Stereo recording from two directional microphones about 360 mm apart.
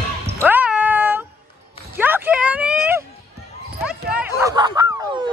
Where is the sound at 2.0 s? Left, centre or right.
Centre.